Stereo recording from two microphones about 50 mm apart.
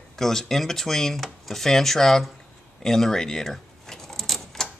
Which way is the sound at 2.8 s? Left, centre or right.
Centre.